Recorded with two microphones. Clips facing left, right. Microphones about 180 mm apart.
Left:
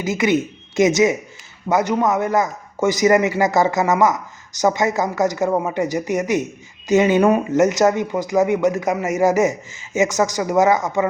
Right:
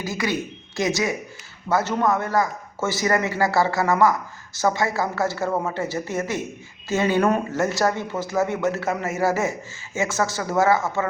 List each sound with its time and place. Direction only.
0.0 s a man's voice: 20° left (ahead or behind)